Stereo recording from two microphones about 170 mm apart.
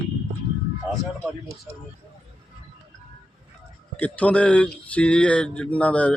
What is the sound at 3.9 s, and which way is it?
Speech, 10° left (ahead or behind).